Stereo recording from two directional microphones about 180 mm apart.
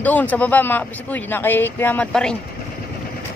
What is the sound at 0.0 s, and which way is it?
A man's voice, 10° left (ahead or behind).